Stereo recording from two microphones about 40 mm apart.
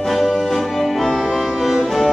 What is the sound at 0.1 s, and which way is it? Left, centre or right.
Music, centre.